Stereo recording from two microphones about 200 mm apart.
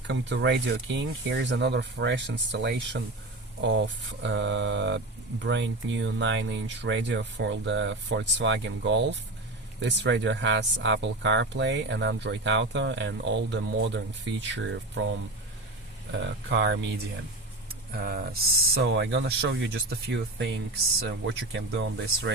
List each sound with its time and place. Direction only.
0.1 s speech: 65° right (ahead or behind)
4.2 s speech: 65° right (ahead or behind)
16.2 s speech: 60° right (ahead or behind)
17.9 s speech: 50° right (ahead or behind)